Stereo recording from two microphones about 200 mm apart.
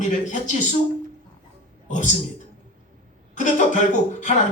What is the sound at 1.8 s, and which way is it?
Speech, 40° left (ahead or behind).